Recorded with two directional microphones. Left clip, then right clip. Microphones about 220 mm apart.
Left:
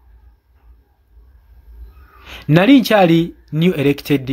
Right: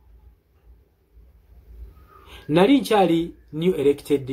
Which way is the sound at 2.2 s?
45° left (ahead or behind).